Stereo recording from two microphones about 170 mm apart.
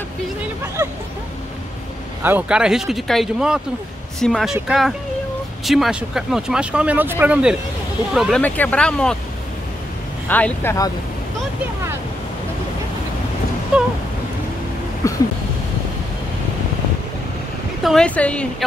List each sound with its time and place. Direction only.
0.8 s speech: 10° right (ahead or behind)
2.2 s speech: 10° right (ahead or behind)
8.1 s speech: centre (ahead or behind)
10.2 s speech: 10° left (ahead or behind)
15.0 s a sound: 15° left (ahead or behind)
17.8 s speech: 5° left (ahead or behind)